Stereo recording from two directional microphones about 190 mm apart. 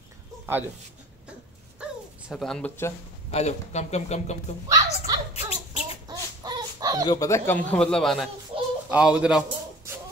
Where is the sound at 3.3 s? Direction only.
35° left (ahead or behind).